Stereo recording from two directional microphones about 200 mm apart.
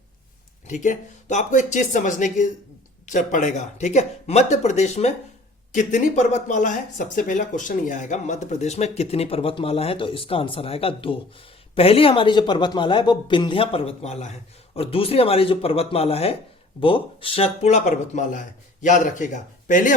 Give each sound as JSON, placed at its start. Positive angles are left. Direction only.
{"t": 0.7, "sound": "speech", "side_deg": 40}